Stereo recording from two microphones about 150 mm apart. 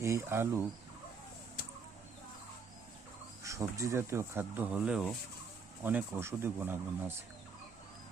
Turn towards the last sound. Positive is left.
turn(degrees=-15)  # may be behind; listen again after turning